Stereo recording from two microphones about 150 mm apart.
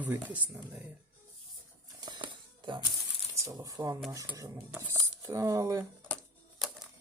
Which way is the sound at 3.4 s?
25° right (ahead or behind).